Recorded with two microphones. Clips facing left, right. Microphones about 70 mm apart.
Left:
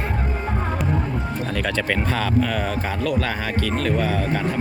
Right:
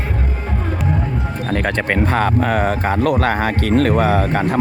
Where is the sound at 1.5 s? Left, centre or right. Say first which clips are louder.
Right 6 dB; right.